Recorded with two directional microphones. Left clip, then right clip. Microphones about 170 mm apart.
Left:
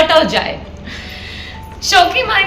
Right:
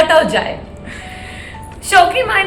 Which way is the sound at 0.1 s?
10° left (ahead or behind).